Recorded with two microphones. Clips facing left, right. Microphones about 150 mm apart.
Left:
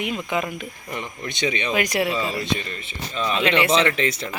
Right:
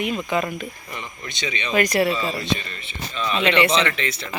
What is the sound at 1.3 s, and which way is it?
Speech, 55° left (ahead or behind).